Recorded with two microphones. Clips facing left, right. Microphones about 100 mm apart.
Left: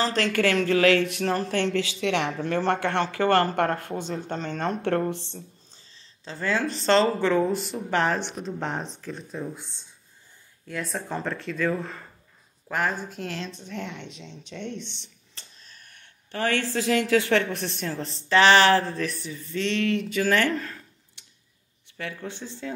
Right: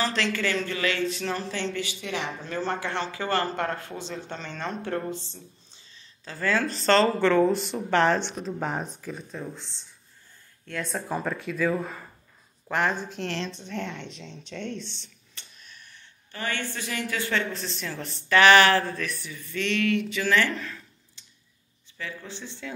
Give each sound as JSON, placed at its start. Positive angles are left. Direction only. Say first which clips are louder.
{"t": 0.0, "sound": "speech", "louder": "left 2 dB", "side_deg": 40}
{"t": 0.3, "sound": "speech", "louder": "left 6 dB", "side_deg": 70}
{"t": 1.3, "sound": "speech", "louder": "left 6 dB", "side_deg": 55}
{"t": 3.7, "sound": "speech", "louder": "left 5 dB", "side_deg": 40}
{"t": 4.8, "sound": "speech", "louder": "left 5 dB", "side_deg": 70}
{"t": 6.2, "sound": "speech", "louder": "even", "side_deg": 20}
{"t": 10.6, "sound": "speech", "louder": "even", "side_deg": 5}
{"t": 15.3, "sound": "a sound", "louder": "right 1 dB", "side_deg": 35}
{"t": 15.9, "sound": "speech", "louder": "left 10 dB", "side_deg": 70}
{"t": 17.8, "sound": "speech", "louder": "left 1 dB", "side_deg": 30}
{"t": 21.2, "sound": "tick-tock", "louder": "left 1 dB", "side_deg": 65}
{"t": 21.9, "sound": "speech", "louder": "left 3 dB", "side_deg": 55}